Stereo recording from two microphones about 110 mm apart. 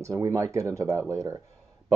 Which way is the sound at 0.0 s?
30° right (ahead or behind).